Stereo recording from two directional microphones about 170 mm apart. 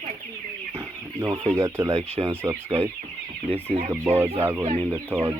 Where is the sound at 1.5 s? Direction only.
15° right (ahead or behind).